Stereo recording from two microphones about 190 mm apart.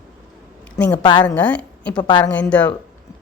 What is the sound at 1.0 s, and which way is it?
Speech, 25° left (ahead or behind).